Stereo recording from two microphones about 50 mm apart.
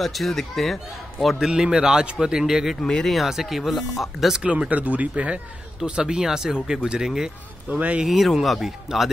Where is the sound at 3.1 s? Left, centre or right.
Centre.